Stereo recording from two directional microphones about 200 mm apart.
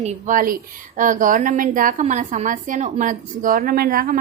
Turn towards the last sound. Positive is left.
turn(degrees=-45)  # may be behind; listen again after turning